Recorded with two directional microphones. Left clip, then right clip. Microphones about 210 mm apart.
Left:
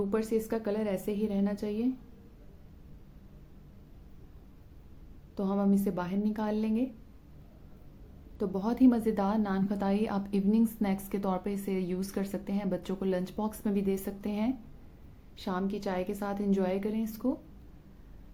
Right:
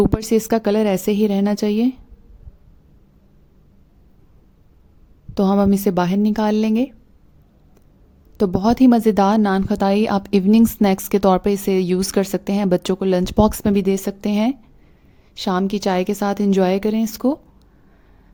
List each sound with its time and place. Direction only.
0.1 s a woman's voice: 50° right (ahead or behind)
5.3 s a woman's voice: 50° right (ahead or behind)
8.4 s a woman's voice: 45° right (ahead or behind)